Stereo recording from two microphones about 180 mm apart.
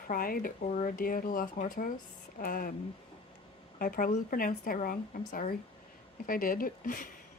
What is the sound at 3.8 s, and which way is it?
Speech, 50° left (ahead or behind).